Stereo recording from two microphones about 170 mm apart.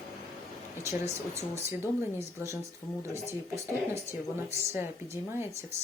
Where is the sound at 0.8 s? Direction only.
15° right (ahead or behind).